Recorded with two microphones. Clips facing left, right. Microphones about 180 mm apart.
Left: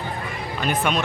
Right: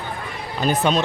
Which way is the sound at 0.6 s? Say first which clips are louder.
Right 4 dB; 35° right (ahead or behind).